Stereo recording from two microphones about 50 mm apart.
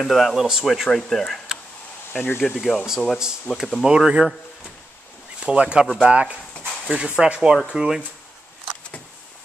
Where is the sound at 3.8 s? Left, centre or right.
Centre.